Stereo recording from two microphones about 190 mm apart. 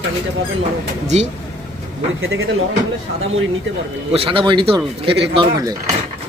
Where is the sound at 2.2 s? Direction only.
90° right.